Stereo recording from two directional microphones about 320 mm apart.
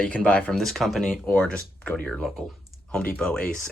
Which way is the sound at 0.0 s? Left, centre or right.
Centre.